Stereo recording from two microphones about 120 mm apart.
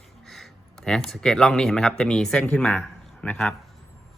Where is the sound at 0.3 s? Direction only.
Centre (ahead or behind).